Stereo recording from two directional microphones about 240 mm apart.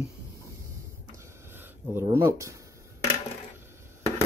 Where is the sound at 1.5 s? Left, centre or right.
Centre.